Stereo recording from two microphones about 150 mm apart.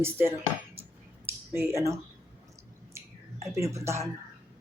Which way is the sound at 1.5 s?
20° right (ahead or behind).